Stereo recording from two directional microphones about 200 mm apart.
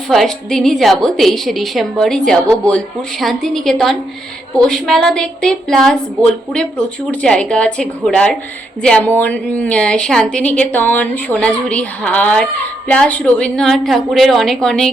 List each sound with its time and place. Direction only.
0.1 s a woman's voice: centre (ahead or behind)